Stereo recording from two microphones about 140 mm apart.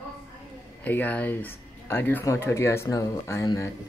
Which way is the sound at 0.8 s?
10° left (ahead or behind).